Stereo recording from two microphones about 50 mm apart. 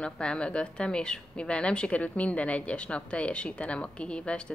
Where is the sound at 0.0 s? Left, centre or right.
Centre.